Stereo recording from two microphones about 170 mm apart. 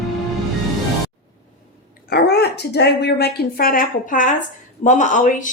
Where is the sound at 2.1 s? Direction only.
70° left (ahead or behind).